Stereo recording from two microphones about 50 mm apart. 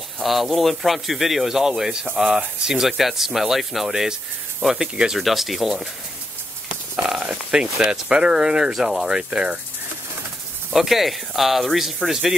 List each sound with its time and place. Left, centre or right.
0.2 s speech: centre
4.7 s speech: centre
5.1 s speech: centre
6.7 s a sound: centre
7.5 s speech: centre
10.7 s speech: centre